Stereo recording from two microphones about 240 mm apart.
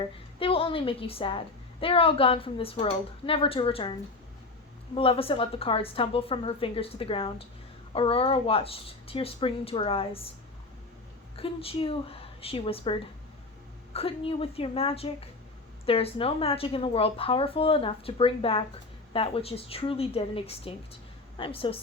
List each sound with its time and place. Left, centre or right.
0.0 s a woman's voice: left
4.9 s a woman's voice: left
11.3 s a woman's voice: left